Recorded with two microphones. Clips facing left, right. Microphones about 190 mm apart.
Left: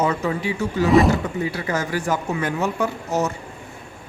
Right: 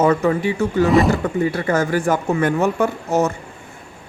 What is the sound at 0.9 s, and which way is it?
Speech, centre (ahead or behind).